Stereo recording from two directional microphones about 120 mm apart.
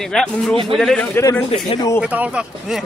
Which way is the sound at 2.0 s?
10° right (ahead or behind).